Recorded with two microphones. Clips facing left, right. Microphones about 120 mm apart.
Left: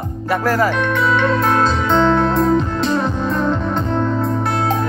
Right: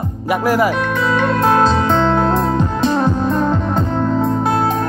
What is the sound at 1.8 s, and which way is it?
Music, 40° right (ahead or behind).